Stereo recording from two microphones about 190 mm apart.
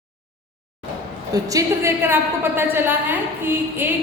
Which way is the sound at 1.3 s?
15° right (ahead or behind).